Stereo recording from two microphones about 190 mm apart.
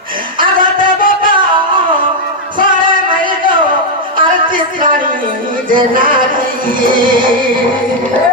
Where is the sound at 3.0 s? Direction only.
25° right (ahead or behind).